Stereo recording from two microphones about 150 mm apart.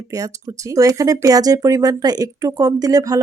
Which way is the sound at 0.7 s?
20° right (ahead or behind).